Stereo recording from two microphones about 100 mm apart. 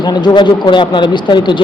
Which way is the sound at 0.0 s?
45° left (ahead or behind).